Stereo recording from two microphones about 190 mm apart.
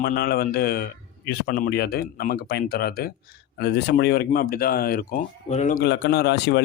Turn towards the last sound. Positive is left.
turn(degrees=60)  # may be behind; listen again after turning